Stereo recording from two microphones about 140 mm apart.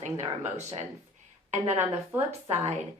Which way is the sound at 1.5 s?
55° right (ahead or behind).